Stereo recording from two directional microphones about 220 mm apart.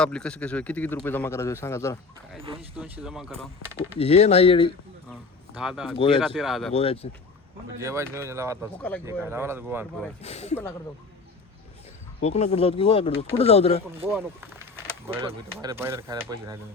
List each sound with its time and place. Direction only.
0.0 s a man's voice: 5° left (ahead or behind)
2.4 s speech: 25° right (ahead or behind)
2.7 s speech: 10° right (ahead or behind)
3.6 s speech: 10° right (ahead or behind)
3.9 s speech: 30° left (ahead or behind)
5.5 s speech: centre (ahead or behind)
6.7 s speech: 25° left (ahead or behind)
7.8 s speech: 10° right (ahead or behind)
10.2 s speech: 30° left (ahead or behind)
12.2 s speech: 30° left (ahead or behind)
14.1 s speech: 10° right (ahead or behind)